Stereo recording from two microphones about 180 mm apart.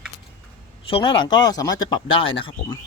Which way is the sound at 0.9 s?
30° left (ahead or behind).